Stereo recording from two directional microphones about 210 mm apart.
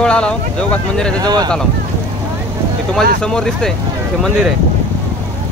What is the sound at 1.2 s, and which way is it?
Speech, 20° right (ahead or behind).